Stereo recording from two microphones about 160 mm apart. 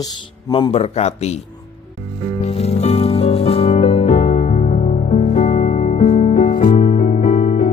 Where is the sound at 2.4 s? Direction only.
40° left (ahead or behind); by 7.7 s 55° left (ahead or behind).